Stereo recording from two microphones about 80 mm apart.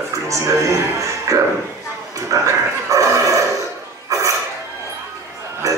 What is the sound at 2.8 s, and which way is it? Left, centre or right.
Dog, right.